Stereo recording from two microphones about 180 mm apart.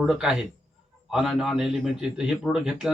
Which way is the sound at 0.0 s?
5° right (ahead or behind).